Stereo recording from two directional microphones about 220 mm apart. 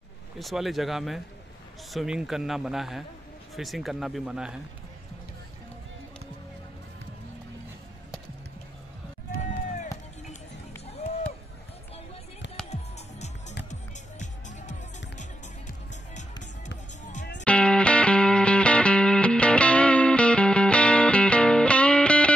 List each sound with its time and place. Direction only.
0.4 s speech: centre (ahead or behind)
9.3 s run: 40° left (ahead or behind)
13.7 s music: 35° left (ahead or behind)
17.0 s music: 35° left (ahead or behind)
17.5 s music: 5° left (ahead or behind)